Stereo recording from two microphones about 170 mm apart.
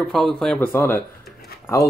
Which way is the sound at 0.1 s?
Centre (ahead or behind).